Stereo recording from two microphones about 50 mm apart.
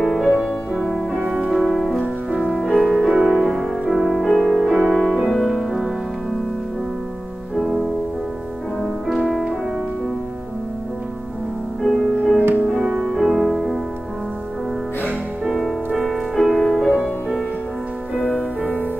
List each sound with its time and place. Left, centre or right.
0.0 s music: centre
1.5 s music: centre
7.5 s music: centre
11.8 s music: centre
12.6 s music: centre
15.5 s music: centre
18.1 s music: left